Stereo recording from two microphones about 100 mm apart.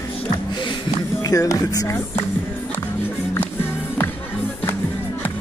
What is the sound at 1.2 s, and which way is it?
Speech, 35° left (ahead or behind).